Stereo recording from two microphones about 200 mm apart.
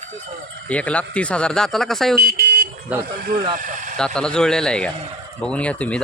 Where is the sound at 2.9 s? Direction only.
5° right (ahead or behind).